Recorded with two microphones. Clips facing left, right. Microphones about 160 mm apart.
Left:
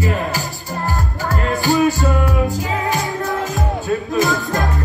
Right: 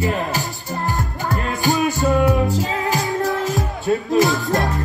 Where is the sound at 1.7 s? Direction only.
20° right (ahead or behind).